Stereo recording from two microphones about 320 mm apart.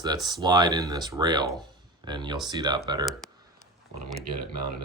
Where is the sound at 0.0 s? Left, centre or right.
Centre.